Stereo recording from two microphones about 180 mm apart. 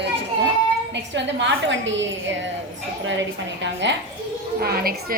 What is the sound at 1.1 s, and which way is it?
A woman's voice, 85° right.